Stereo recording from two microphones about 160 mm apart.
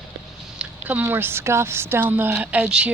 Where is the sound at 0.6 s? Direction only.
10° right (ahead or behind).